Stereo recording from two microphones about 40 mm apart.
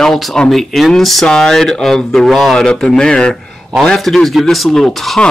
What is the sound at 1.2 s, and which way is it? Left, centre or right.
Speech, centre.